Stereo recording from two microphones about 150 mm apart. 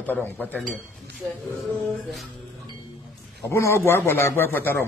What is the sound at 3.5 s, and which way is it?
A man's voice, 20° left (ahead or behind).